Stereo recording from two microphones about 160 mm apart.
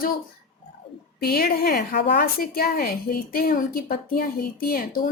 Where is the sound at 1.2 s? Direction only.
70° left (ahead or behind).